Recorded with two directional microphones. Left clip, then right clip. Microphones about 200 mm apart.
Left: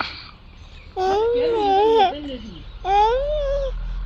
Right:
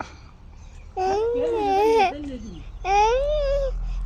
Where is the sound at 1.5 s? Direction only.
15° left (ahead or behind).